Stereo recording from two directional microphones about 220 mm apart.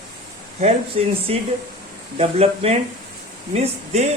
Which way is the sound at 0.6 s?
30° right (ahead or behind).